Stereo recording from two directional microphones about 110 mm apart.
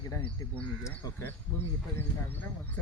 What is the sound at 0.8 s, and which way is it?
Speech, 30° left (ahead or behind).